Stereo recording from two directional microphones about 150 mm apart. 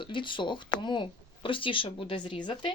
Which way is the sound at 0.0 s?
35° left (ahead or behind).